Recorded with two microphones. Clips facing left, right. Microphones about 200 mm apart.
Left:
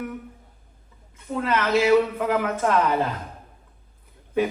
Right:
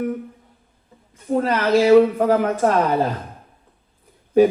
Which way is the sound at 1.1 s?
40° right (ahead or behind).